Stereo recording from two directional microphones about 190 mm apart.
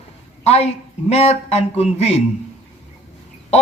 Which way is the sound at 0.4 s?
35° left (ahead or behind).